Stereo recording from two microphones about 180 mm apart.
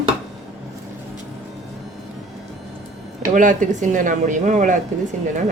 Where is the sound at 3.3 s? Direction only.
45° right (ahead or behind).